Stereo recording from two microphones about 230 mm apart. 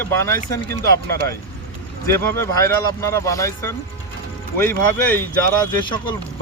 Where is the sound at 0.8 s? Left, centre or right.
Right.